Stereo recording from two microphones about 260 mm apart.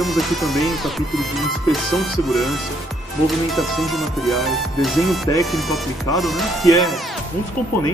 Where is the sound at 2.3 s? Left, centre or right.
Centre.